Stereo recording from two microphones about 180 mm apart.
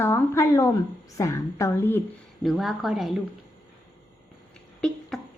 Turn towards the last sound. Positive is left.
turn(degrees=0)  # may be behind; listen again after turning